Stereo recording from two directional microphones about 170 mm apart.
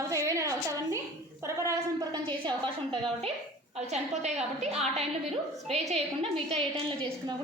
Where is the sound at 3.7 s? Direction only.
40° right (ahead or behind).